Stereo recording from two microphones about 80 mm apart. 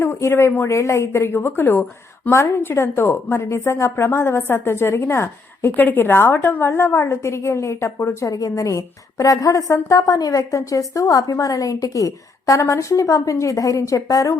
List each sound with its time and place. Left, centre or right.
0.0 s a woman's voice: left